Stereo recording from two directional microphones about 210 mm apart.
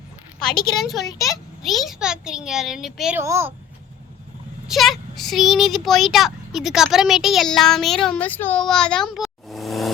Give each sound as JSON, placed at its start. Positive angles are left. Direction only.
{"t": 0.6, "sound": "speech", "side_deg": 0}
{"t": 1.0, "sound": "a child's voice", "side_deg": 15}
{"t": 1.6, "sound": "speech", "side_deg": 0}
{"t": 4.7, "sound": "speech", "side_deg": 0}